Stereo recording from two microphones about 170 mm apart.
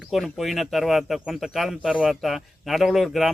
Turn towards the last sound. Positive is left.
turn(degrees=0)  # may be behind; listen again after turning